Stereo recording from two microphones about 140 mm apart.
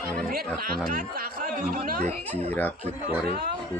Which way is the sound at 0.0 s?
90° right.